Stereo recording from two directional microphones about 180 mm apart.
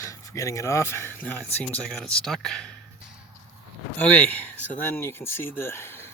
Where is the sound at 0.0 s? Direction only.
15° left (ahead or behind).